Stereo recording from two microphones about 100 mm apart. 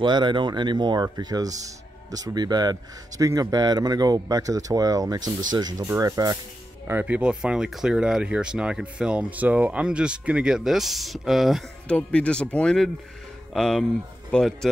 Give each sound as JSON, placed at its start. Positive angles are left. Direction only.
{"t": 0.0, "sound": "a man's voice", "side_deg": -50}
{"t": 6.9, "sound": "speech", "side_deg": -15}
{"t": 11.9, "sound": "speech", "side_deg": 10}